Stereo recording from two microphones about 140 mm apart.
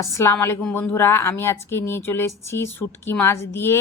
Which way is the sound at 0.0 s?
20° left (ahead or behind).